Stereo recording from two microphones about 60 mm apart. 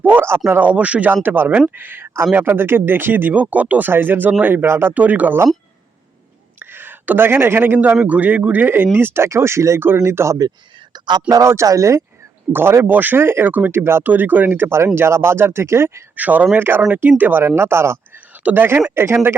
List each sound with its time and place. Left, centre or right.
0.0 s speech: right
0.3 s speech: right
0.7 s speech: right
4.9 s speech: right
6.6 s a sound: right
7.3 s speech: right
11.4 s speech: right
12.5 s speech: right
14.0 s speech: right
16.1 s speech: right
16.6 s speech: right
17.4 s speech: right
18.4 s speech: right